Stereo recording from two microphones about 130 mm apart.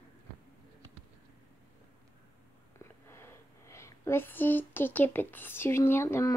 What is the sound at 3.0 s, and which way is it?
Speech, 20° left (ahead or behind).